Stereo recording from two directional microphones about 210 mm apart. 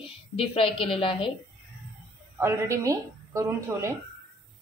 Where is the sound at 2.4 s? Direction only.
15° right (ahead or behind).